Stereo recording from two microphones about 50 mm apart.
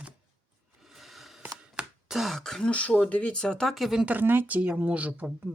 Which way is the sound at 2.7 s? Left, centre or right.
Left.